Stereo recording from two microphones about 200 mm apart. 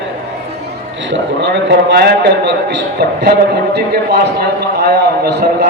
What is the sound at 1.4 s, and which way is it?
A man's voice, 60° right (ahead or behind).